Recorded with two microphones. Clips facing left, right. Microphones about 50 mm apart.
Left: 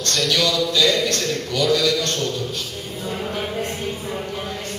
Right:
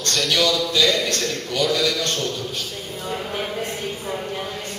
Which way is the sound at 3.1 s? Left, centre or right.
Centre.